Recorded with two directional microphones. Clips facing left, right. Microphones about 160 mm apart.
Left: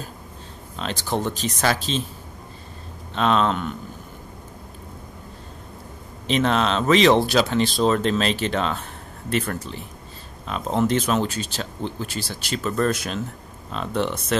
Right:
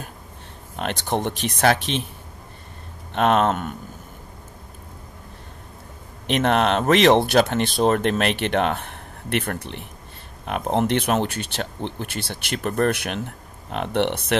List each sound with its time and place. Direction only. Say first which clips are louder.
0.7 s speech: right 1 dB; 60° right (ahead or behind)
3.2 s speech: right 2 dB; 60° right (ahead or behind)
6.2 s speech: right 1 dB; 60° right (ahead or behind)